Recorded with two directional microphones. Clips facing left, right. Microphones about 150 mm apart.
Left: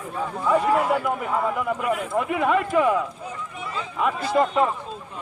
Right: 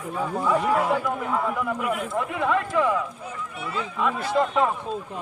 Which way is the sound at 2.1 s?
15° left (ahead or behind).